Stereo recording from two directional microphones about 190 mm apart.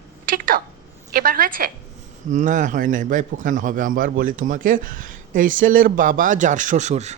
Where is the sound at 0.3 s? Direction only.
45° right (ahead or behind).